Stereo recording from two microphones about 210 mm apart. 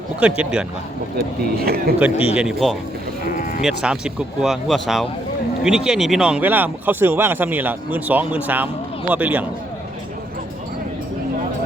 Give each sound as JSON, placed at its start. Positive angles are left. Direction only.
{"t": 0.2, "sound": "speech", "side_deg": -5}
{"t": 1.6, "sound": "speech", "side_deg": -45}
{"t": 2.3, "sound": "speech", "side_deg": -5}
{"t": 3.3, "sound": "speech", "side_deg": 40}
{"t": 3.6, "sound": "speech", "side_deg": 0}